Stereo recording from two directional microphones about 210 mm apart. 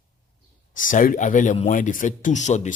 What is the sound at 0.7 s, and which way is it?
Speech, 40° left (ahead or behind).